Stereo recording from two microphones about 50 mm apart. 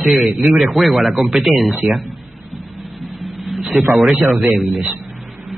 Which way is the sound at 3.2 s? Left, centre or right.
Centre.